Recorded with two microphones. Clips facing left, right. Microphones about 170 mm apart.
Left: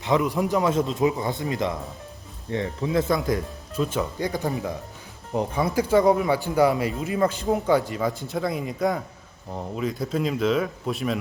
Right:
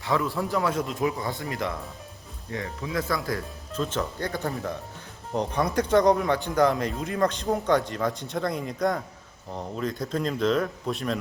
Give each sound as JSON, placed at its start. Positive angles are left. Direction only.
{"t": 0.0, "sound": "a man's voice", "side_deg": 20}